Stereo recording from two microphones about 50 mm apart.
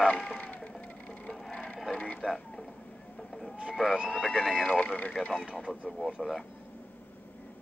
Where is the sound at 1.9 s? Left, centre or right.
Left.